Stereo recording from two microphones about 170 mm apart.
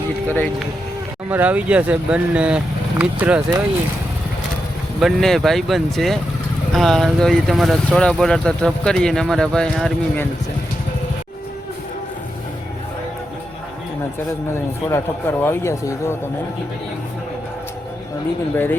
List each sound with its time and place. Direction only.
0.3 s speech: 10° left (ahead or behind)
1.3 s speech: 10° right (ahead or behind)
4.9 s speech: centre (ahead or behind)
14.8 s speech: 15° left (ahead or behind)
18.5 s speech: 10° left (ahead or behind)